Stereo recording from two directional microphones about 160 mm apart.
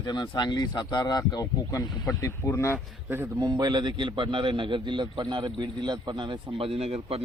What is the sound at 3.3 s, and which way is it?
A man's voice, 25° right (ahead or behind).